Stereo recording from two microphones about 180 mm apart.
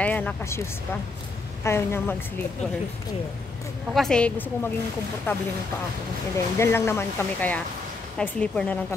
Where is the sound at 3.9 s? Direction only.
Centre (ahead or behind).